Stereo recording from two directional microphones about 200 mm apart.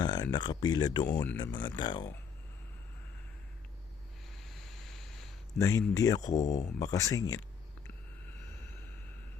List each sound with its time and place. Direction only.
0.0 s speech: 20° left (ahead or behind)
4.4 s a sound: centre (ahead or behind)
5.5 s speech: 15° left (ahead or behind)
6.3 s speech: 35° left (ahead or behind)
6.7 s speech: 15° left (ahead or behind)